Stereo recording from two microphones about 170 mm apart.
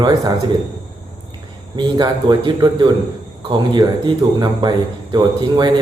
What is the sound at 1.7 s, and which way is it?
Speech, 25° right (ahead or behind).